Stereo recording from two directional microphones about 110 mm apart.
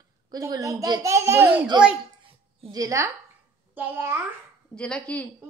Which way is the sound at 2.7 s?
30° right (ahead or behind).